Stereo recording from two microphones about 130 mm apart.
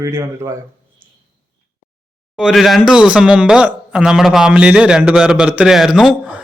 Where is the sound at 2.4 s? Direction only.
Centre (ahead or behind).